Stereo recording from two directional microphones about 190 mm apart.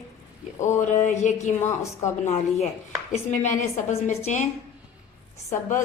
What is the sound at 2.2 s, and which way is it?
Speech, 35° left (ahead or behind).